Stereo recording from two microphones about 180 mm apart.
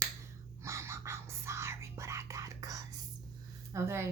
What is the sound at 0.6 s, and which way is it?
Whispering, 15° right (ahead or behind).